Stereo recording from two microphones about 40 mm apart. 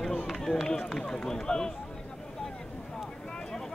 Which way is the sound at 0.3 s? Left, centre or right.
Centre.